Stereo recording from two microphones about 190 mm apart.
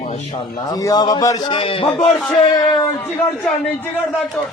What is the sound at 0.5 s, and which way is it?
A man's voice, 20° left (ahead or behind).